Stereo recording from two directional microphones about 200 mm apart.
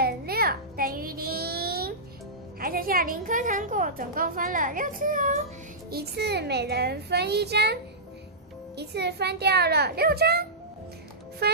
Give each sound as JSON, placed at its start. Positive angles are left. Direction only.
{"t": 0.0, "sound": "child singing", "side_deg": -50}
{"t": 2.6, "sound": "a woman's voice", "side_deg": -45}
{"t": 5.9, "sound": "a child's voice", "side_deg": -55}
{"t": 11.4, "sound": "a woman's voice", "side_deg": -55}